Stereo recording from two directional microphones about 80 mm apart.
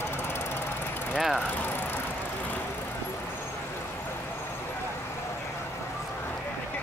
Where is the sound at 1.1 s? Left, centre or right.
Centre.